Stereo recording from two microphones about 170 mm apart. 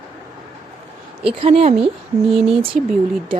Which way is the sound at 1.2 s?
35° right (ahead or behind).